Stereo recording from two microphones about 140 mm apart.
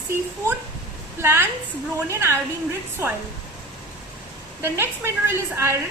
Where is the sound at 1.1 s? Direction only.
15° right (ahead or behind).